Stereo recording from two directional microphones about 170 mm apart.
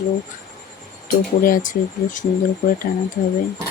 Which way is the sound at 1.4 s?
50° left (ahead or behind).